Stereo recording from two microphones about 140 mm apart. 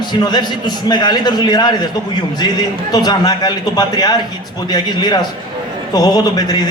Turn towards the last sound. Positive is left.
turn(degrees=30)  # may be behind; listen again after turning